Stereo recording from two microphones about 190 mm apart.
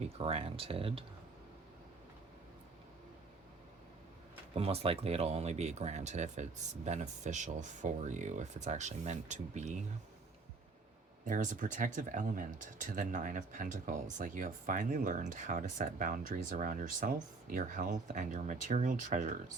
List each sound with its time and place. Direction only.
0.2 s speech: 30° right (ahead or behind)
4.5 s speech: 30° right (ahead or behind)
11.3 s speech: 40° right (ahead or behind)